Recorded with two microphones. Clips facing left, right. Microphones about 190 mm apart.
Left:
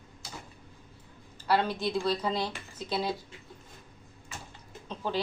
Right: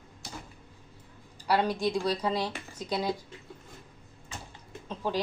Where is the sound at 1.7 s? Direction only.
5° left (ahead or behind).